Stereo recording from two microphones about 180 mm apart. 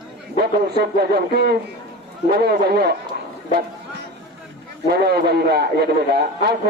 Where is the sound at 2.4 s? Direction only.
60° right (ahead or behind).